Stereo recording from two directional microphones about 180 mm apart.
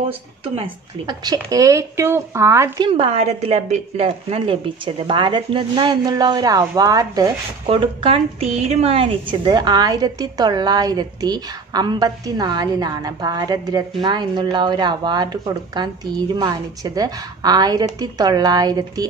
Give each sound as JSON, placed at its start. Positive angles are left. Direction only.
{"t": 0.6, "sound": "speech", "side_deg": -25}
{"t": 2.9, "sound": "a woman's voice", "side_deg": -30}
{"t": 7.6, "sound": "a woman's voice", "side_deg": -30}